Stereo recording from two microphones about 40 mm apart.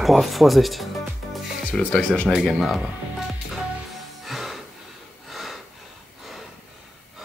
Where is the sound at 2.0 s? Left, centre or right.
Left.